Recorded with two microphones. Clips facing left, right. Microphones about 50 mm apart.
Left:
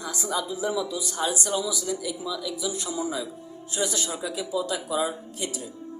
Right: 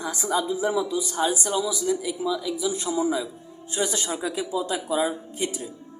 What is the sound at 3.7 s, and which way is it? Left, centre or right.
A woman's voice, right.